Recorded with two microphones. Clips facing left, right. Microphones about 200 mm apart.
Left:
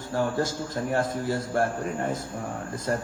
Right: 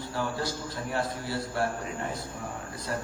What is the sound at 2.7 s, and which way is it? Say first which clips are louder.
Speech: left 7 dB; 45° left (ahead or behind).